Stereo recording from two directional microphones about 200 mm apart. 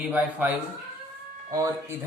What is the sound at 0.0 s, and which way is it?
Speech, 10° right (ahead or behind).